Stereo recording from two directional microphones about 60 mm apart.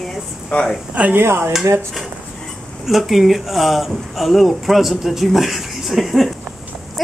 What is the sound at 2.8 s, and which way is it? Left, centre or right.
Speech, centre.